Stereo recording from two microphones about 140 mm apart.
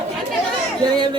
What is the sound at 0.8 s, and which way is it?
Speech, 30° right (ahead or behind).